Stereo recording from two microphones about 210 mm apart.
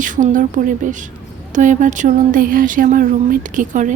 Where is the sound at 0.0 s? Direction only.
40° right (ahead or behind).